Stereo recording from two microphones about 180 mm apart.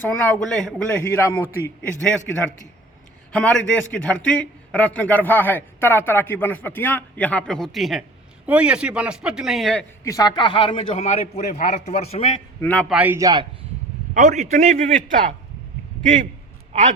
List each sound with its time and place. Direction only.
0.2 s a man's voice: 5° left (ahead or behind)
3.3 s a man's voice: 5° left (ahead or behind)
10.0 s a man's voice: 20° left (ahead or behind); by 12.4 s 35° left (ahead or behind)
12.6 s a man's voice: 5° left (ahead or behind)
12.9 s a man's voice: 10° right (ahead or behind)
14.1 s a man's voice: 40° right (ahead or behind)